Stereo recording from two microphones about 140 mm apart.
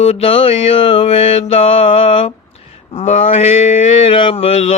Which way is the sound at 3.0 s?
55° left (ahead or behind).